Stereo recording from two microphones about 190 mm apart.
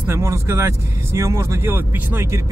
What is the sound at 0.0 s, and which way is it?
Speech, 15° right (ahead or behind).